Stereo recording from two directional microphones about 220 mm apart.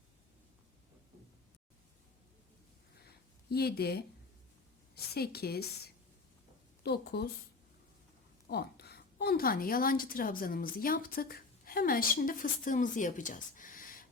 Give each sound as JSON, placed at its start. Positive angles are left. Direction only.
{"t": 3.5, "sound": "speech", "side_deg": 45}
{"t": 5.1, "sound": "speech", "side_deg": 45}
{"t": 6.8, "sound": "speech", "side_deg": 45}
{"t": 8.4, "sound": "a woman's voice", "side_deg": 45}